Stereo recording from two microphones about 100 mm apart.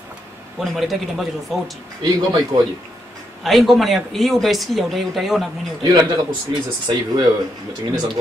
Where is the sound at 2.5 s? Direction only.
55° right (ahead or behind).